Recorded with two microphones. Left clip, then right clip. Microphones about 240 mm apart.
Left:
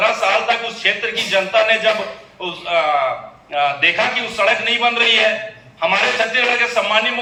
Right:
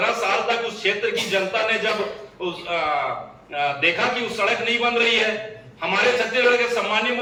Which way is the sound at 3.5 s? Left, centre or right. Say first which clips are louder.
Left 5 dB; centre.